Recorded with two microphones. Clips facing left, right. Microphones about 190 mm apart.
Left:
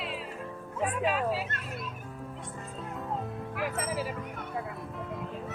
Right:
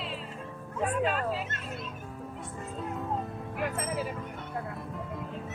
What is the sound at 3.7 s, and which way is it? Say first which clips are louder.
Music: even; centre (ahead or behind).